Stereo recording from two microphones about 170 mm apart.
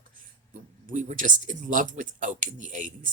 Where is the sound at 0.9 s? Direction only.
50° right (ahead or behind).